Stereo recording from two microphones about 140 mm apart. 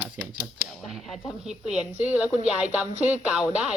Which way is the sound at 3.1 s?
10° right (ahead or behind).